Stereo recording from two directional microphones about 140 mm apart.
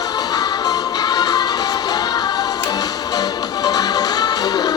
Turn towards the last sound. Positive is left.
turn(degrees=30)  # may be behind; listen again after turning